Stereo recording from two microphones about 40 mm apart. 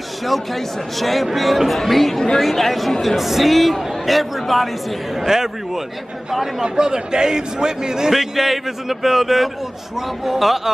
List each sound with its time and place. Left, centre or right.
0.2 s speech: centre
5.1 s a man's voice: centre
6.6 s a man's voice: centre